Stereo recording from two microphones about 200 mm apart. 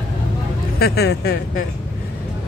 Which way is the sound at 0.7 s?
50° left (ahead or behind).